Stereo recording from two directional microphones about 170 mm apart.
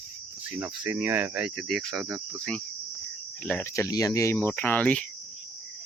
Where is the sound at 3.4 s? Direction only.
10° left (ahead or behind).